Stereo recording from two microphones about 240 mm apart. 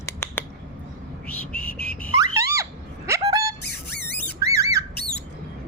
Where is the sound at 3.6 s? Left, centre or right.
Left.